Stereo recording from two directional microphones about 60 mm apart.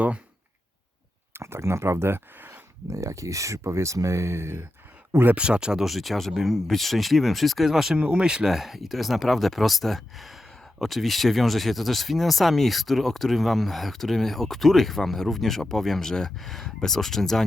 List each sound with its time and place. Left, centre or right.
1.3 s speech: right
2.9 s speech: right
5.3 s speech: centre
7.9 s speech: centre